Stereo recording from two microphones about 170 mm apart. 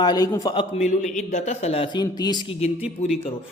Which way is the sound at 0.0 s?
25° left (ahead or behind).